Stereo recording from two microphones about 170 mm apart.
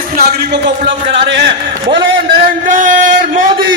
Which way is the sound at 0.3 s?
90° right.